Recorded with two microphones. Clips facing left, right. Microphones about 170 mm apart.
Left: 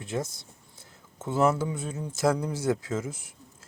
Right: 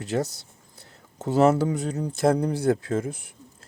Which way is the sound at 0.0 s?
75° right (ahead or behind).